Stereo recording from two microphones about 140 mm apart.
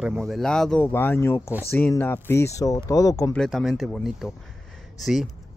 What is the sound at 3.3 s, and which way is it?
Speech, 5° left (ahead or behind).